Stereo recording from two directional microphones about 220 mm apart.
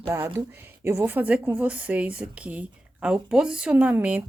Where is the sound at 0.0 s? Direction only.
15° right (ahead or behind).